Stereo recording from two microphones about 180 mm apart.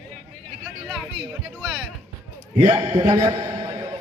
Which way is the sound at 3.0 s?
20° right (ahead or behind).